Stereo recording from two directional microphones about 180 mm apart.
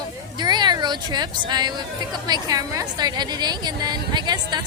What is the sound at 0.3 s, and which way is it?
A woman's voice, 25° right (ahead or behind).